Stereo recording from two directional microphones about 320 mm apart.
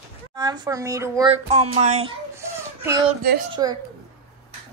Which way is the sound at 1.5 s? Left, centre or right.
Right.